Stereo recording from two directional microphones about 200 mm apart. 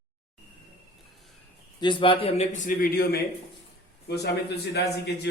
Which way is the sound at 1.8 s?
25° left (ahead or behind).